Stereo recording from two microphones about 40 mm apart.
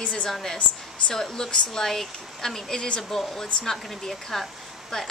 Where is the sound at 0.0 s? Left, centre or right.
Left.